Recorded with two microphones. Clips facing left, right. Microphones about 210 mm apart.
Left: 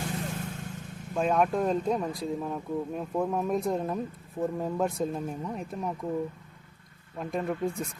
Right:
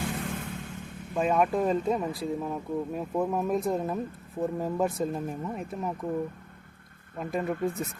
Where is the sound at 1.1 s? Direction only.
5° right (ahead or behind).